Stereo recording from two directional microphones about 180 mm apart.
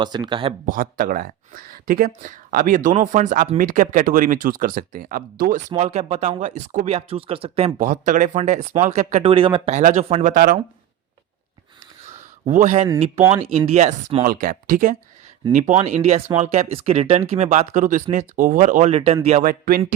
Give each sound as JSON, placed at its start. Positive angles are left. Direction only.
{"t": 0.0, "sound": "speech", "side_deg": -25}
{"t": 0.7, "sound": "speech", "side_deg": -50}
{"t": 5.7, "sound": "speech", "side_deg": -40}
{"t": 9.3, "sound": "speech", "side_deg": -30}
{"t": 12.0, "sound": "a sound", "side_deg": -40}
{"t": 13.3, "sound": "speech", "side_deg": -35}
{"t": 14.3, "sound": "speech", "side_deg": -45}
{"t": 15.5, "sound": "speech", "side_deg": -40}